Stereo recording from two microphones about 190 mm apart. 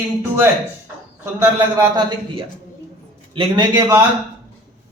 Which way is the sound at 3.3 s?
25° right (ahead or behind).